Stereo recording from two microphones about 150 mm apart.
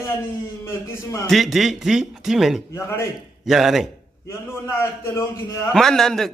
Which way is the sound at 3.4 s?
Centre (ahead or behind).